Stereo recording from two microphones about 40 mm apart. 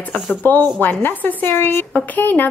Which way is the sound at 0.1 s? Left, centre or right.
Left.